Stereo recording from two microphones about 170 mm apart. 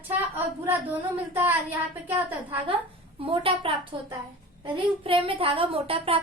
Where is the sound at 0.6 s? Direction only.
10° right (ahead or behind).